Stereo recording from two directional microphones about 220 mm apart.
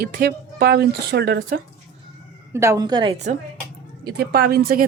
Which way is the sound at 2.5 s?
15° right (ahead or behind).